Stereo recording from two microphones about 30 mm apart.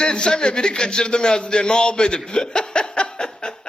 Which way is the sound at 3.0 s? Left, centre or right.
Left.